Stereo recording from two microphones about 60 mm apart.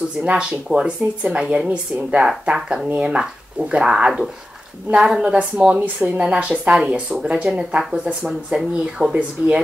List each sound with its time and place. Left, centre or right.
0.2 s a woman's voice: centre